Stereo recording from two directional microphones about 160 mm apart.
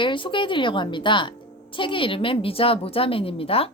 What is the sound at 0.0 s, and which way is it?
A woman's voice, 30° left (ahead or behind).